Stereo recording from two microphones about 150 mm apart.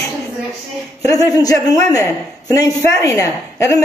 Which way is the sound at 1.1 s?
25° left (ahead or behind).